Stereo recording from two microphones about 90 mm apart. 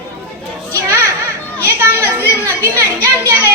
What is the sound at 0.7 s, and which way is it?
Children playing, 30° right (ahead or behind).